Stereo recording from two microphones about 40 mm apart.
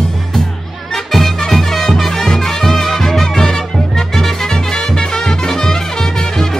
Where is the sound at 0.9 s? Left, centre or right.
Centre.